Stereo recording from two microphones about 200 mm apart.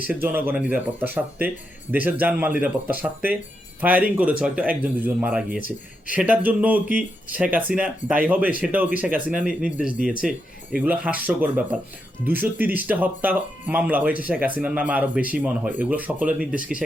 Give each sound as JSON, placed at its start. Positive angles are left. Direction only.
{"t": 0.1, "sound": "speech", "side_deg": -10}
{"t": 5.5, "sound": "speech", "side_deg": 40}
{"t": 6.1, "sound": "speech", "side_deg": -5}